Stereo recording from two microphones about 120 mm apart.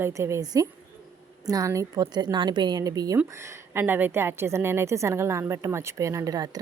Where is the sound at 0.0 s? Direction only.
25° right (ahead or behind).